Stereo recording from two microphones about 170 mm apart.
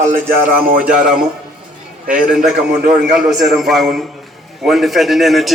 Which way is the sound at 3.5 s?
Centre (ahead or behind).